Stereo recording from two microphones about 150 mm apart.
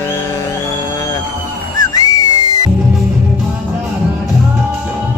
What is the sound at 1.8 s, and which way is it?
Whistle, 25° left (ahead or behind).